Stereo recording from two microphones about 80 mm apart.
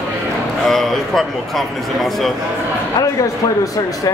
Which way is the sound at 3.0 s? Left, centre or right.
Left.